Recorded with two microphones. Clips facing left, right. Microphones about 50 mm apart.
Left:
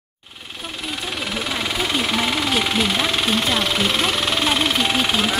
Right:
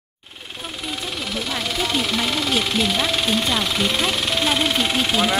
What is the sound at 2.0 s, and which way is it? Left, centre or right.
Speech, centre.